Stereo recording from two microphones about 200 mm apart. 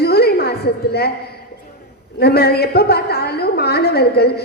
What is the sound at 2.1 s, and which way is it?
A woman's voice, 55° left (ahead or behind).